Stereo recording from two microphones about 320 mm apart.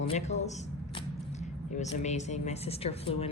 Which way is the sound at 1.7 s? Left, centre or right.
Left.